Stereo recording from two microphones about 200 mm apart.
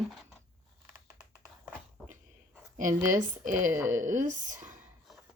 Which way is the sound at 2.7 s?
40° right (ahead or behind).